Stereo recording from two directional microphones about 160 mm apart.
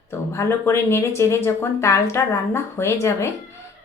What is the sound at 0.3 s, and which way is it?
Speech, 15° left (ahead or behind).